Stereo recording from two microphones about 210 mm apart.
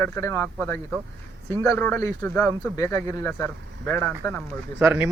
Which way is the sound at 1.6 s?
10° left (ahead or behind).